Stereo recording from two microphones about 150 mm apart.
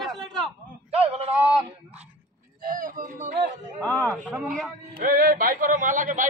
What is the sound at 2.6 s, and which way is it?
Speech, 65° right (ahead or behind).